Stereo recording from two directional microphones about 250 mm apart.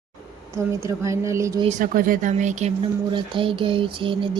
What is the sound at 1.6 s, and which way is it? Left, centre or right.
Speech, right.